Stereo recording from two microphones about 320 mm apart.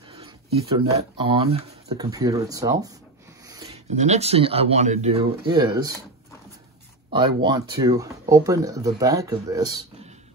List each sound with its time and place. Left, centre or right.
0.1 s speech: centre
7.1 s speech: centre